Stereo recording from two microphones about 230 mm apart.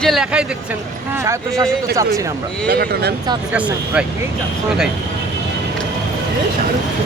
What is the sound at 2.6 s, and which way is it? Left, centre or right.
Speech, right.